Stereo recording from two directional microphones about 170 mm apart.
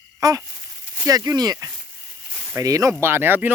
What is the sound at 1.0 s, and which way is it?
Speech, 20° right (ahead or behind).